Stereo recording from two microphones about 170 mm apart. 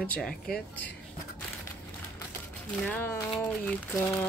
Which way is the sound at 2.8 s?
10° left (ahead or behind).